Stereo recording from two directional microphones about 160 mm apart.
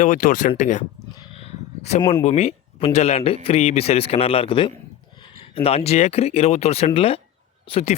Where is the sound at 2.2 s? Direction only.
40° left (ahead or behind).